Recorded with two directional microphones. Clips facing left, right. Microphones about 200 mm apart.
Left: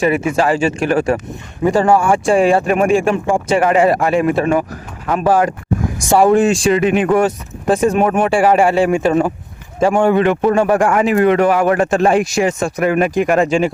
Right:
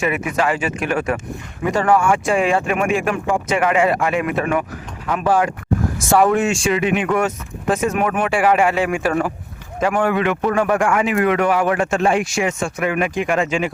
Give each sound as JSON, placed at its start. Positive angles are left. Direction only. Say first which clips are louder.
{"t": 0.0, "sound": "a man's voice", "louder": "left 5 dB", "side_deg": 30}